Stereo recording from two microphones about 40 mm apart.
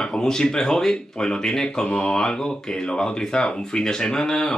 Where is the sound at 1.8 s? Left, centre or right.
Left.